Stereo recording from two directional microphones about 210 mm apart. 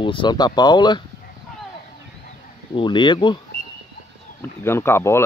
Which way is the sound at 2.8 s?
20° left (ahead or behind).